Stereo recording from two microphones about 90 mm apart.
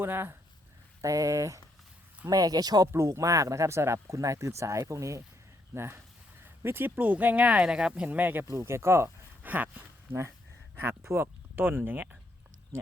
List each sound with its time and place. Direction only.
0.0 s speech: 25° right (ahead or behind)
1.0 s speech: 35° right (ahead or behind)
2.9 s speech: 35° right (ahead or behind); by 10.2 s 20° right (ahead or behind)
10.8 s speech: 30° right (ahead or behind)